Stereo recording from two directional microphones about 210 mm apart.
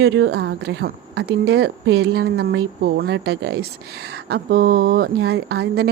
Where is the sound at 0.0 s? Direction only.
60° right (ahead or behind).